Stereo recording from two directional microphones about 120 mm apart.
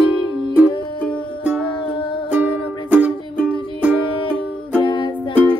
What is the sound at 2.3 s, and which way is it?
Music, 10° right (ahead or behind).